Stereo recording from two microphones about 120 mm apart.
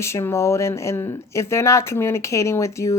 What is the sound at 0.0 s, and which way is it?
Speech, 25° left (ahead or behind).